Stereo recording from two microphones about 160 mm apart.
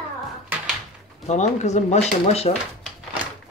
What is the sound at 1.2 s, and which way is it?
Speech, 45° left (ahead or behind).